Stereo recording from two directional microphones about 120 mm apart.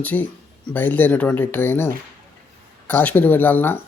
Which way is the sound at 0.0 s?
15° left (ahead or behind).